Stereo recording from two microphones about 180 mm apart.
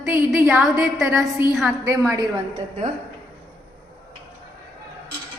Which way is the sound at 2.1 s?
15° right (ahead or behind).